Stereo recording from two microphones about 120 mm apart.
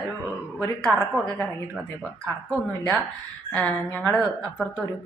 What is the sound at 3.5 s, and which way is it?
Music, 10° left (ahead or behind).